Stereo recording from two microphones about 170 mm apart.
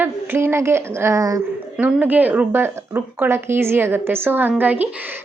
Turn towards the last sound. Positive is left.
turn(degrees=-10)  # may be behind; listen again after turning